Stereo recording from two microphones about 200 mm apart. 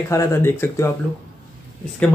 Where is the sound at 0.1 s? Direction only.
15° left (ahead or behind).